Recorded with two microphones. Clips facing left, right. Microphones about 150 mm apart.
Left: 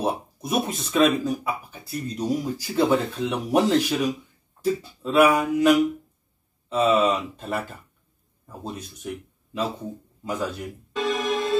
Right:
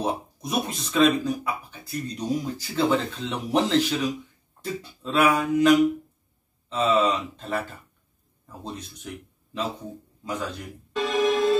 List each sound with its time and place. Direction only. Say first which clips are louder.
0.0 s speech: left 2 dB; 5° left (ahead or behind)
6.7 s speech: left 2 dB; 10° left (ahead or behind)
10.2 s music: left 3 dB; 5° left (ahead or behind)